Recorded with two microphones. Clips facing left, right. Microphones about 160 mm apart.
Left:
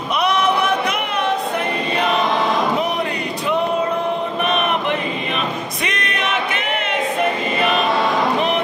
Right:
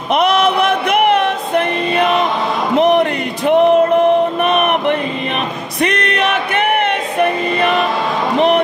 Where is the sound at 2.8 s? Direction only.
65° right (ahead or behind).